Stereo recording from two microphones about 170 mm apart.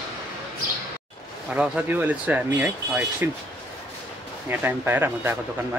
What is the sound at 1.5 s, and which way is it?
A man's voice, 10° right (ahead or behind).